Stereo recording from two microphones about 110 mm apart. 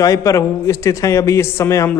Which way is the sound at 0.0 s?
30° left (ahead or behind).